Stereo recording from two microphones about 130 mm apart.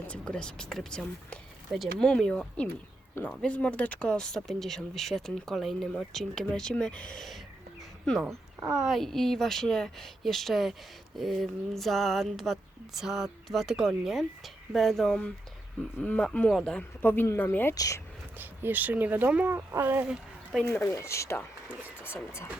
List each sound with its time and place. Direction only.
0.1 s speech: 10° left (ahead or behind)
17.7 s speech: 25° left (ahead or behind)
18.3 s speech: 15° right (ahead or behind)
20.1 s a sound: centre (ahead or behind)
20.8 s speech: 20° left (ahead or behind)